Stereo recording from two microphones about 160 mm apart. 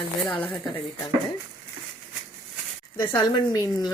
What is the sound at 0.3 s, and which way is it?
Speech, 10° left (ahead or behind).